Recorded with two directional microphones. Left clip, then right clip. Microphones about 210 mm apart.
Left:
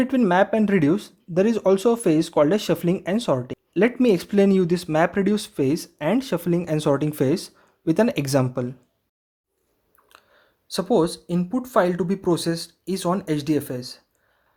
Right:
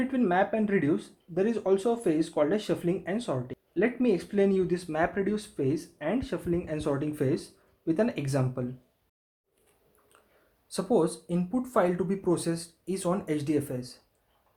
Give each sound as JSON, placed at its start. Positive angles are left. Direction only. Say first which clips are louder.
{"t": 0.0, "sound": "speech", "louder": "left 7 dB", "side_deg": 45}
{"t": 10.7, "sound": "speech", "louder": "left 6 dB", "side_deg": 40}